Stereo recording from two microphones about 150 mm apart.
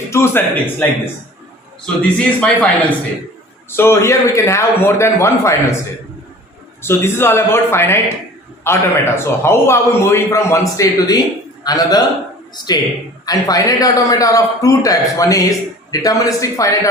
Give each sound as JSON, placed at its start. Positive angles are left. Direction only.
{"t": 0.1, "sound": "a man's voice", "side_deg": 15}
{"t": 2.0, "sound": "a man's voice", "side_deg": 10}
{"t": 3.7, "sound": "a man's voice", "side_deg": 15}
{"t": 6.8, "sound": "a man's voice", "side_deg": 15}
{"t": 13.2, "sound": "a man's voice", "side_deg": 25}